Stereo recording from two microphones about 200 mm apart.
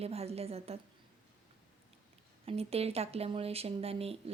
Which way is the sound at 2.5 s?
30° right (ahead or behind).